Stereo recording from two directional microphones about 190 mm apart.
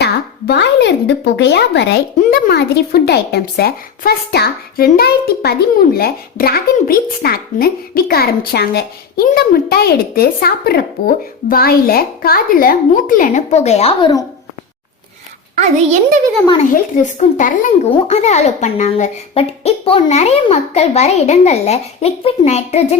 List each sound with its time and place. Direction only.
0.0 s speech: 65° left (ahead or behind); by 14.1 s 30° left (ahead or behind)
15.5 s a child's voice: 40° right (ahead or behind)
16.7 s speech: 40° left (ahead or behind)